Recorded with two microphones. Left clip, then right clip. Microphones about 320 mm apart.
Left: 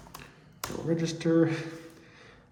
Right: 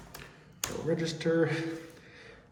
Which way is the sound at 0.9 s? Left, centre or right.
Left.